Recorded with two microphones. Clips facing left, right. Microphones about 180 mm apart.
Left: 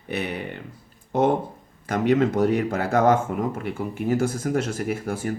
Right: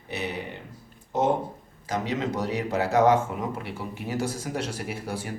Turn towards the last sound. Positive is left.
turn(degrees=50)  # may be behind; listen again after turning